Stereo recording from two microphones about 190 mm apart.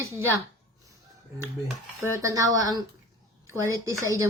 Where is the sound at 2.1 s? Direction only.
15° right (ahead or behind).